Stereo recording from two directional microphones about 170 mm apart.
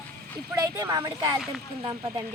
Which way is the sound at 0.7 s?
15° right (ahead or behind).